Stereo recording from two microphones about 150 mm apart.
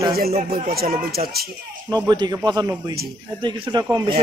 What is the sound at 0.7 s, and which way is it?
Speech, 90° right.